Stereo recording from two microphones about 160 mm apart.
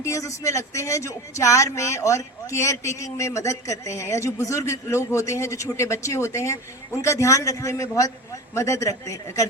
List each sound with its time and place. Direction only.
0.0 s speech: 20° left (ahead or behind)